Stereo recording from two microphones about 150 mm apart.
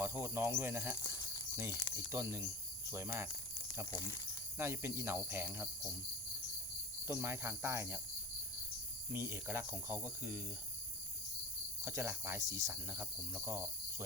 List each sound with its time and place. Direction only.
0.0 s speech: 15° right (ahead or behind)
0.9 s speech: 25° left (ahead or behind)
2.1 s cricket: 20° right (ahead or behind)
2.9 s speech: 20° right (ahead or behind)
3.9 s speech: 20° left (ahead or behind)
4.5 s speech: 15° right (ahead or behind)
7.1 s cricket: 20° right (ahead or behind)
9.1 s speech: 15° right (ahead or behind)
11.9 s speech: 20° right (ahead or behind)